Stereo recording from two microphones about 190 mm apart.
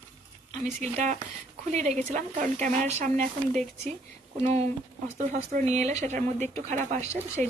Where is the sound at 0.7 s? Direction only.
40° right (ahead or behind).